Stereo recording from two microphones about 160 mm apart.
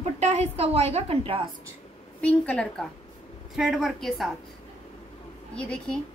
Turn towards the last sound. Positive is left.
turn(degrees=5)  # may be behind; listen again after turning